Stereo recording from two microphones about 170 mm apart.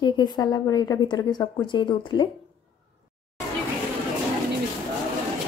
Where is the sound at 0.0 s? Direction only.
25° left (ahead or behind).